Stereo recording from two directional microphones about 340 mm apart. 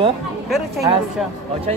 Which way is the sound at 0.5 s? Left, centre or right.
Centre.